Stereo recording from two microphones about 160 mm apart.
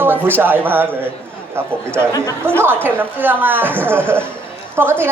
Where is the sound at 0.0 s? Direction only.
15° right (ahead or behind).